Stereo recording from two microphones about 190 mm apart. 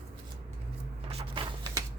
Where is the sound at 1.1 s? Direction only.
30° right (ahead or behind).